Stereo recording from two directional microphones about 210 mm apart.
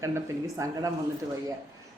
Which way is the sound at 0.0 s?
15° right (ahead or behind).